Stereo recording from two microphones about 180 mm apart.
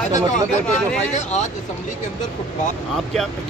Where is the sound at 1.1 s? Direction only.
40° left (ahead or behind).